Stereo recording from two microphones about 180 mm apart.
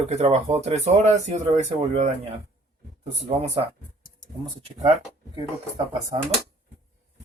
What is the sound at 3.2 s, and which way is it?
Speech, 35° right (ahead or behind).